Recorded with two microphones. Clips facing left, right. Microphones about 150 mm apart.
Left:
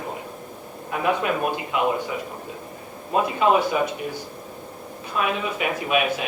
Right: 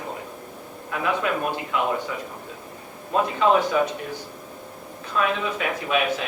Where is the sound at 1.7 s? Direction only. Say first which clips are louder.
Left 2 dB; 20° left (ahead or behind).